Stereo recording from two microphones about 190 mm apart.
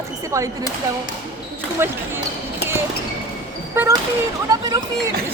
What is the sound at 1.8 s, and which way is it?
Speech, 10° right (ahead or behind).